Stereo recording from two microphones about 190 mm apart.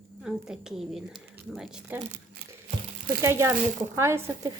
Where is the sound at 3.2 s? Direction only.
15° right (ahead or behind).